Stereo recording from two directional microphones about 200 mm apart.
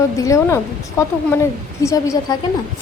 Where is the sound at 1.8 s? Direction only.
15° left (ahead or behind).